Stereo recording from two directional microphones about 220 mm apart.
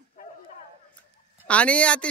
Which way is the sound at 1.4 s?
5° left (ahead or behind).